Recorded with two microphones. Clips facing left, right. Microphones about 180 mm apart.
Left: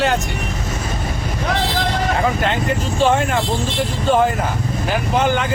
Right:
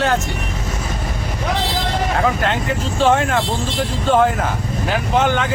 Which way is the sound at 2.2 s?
Centre (ahead or behind).